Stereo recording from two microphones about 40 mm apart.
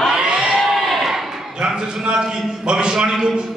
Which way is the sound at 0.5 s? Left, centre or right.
Centre.